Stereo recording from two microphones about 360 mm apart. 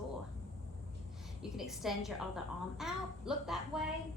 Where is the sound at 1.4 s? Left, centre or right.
Centre.